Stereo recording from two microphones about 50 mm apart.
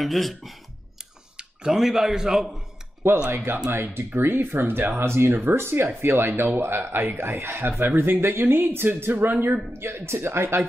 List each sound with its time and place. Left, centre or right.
0.0 s speech: centre
1.3 s a sound: centre
1.8 s a man's voice: centre
3.3 s speech: right
5.0 s speech: right
7.8 s speech: right
9.7 s speech: right